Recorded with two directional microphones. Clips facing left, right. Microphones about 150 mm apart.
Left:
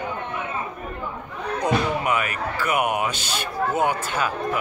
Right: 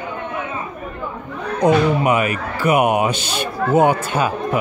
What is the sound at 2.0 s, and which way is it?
A man's voice, 20° right (ahead or behind).